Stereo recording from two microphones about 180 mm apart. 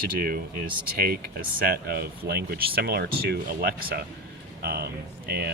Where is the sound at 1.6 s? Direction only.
60° right (ahead or behind).